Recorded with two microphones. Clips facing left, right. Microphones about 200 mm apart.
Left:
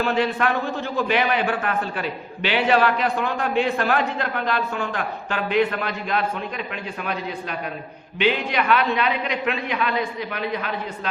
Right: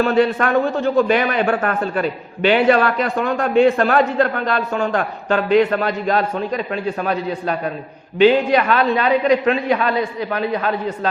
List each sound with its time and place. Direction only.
0.0 s a man's voice: 45° right (ahead or behind)